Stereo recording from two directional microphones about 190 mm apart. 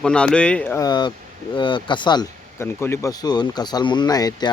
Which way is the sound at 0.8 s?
20° left (ahead or behind).